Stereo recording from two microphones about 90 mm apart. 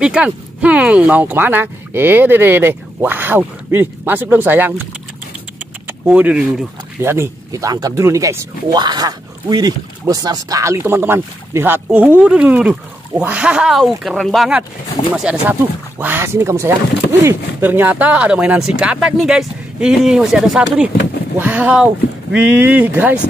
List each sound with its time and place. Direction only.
0.0 s speech: 10° right (ahead or behind)
5.9 s vehicle: 20° right (ahead or behind)
6.3 s speech: 5° right (ahead or behind)
7.0 s speech: 30° right (ahead or behind)
8.7 s speech: 50° right (ahead or behind)
10.6 s speech: 30° right (ahead or behind); by 14.5 s centre (ahead or behind)
15.4 s speech: 20° right (ahead or behind)